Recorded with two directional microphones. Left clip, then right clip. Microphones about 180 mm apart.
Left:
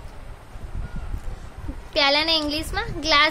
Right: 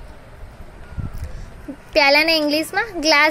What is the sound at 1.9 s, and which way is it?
Speech, 25° right (ahead or behind).